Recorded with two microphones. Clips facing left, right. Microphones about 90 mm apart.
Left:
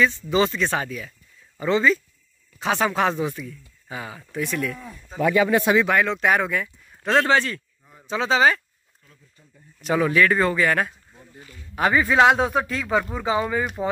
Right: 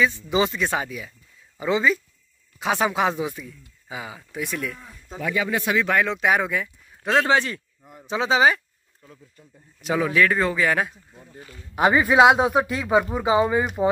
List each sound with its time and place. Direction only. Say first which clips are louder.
0.0 s speech: left 1 dB; 10° right (ahead or behind)
5.1 s speech: left 6 dB; 55° left (ahead or behind)
5.9 s speech: left 1 dB; centre (ahead or behind)
7.2 s speech: even; 20° right (ahead or behind)
9.8 s speech: left 1 dB; 5° right (ahead or behind)